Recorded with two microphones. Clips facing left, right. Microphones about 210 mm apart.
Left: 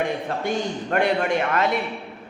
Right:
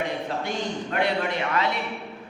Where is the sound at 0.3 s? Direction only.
50° left (ahead or behind).